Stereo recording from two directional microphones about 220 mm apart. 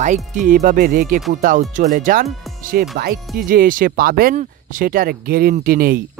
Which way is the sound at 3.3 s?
40° right (ahead or behind).